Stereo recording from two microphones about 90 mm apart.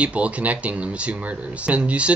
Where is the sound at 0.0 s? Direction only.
15° right (ahead or behind).